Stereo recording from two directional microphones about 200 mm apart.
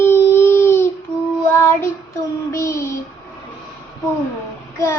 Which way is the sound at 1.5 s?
10° left (ahead or behind).